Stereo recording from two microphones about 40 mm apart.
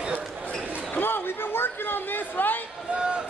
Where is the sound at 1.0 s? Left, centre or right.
Left.